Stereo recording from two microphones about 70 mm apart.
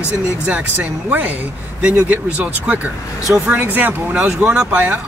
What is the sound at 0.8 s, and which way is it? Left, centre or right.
Speech, right.